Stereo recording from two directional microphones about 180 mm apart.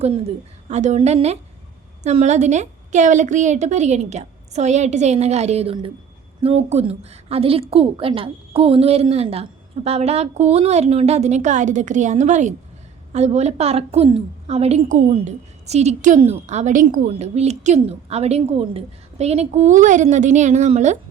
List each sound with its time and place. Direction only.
0.0 s a woman's voice: 35° right (ahead or behind)